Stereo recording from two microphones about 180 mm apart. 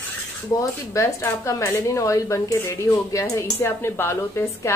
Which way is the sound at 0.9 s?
15° left (ahead or behind).